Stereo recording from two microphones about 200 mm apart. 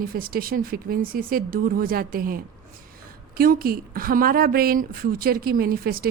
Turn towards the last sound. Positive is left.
turn(degrees=-50)  # may be behind; listen again after turning